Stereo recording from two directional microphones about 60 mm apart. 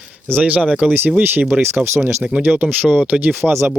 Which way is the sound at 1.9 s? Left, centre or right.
Right.